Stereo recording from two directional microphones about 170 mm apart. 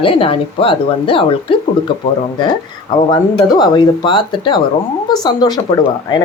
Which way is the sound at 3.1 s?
25° left (ahead or behind).